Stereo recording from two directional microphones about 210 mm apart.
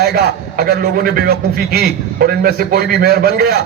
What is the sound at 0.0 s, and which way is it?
A man's voice, 50° right (ahead or behind).